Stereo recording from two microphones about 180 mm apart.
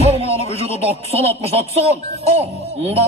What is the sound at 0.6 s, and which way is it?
Speech, 35° right (ahead or behind).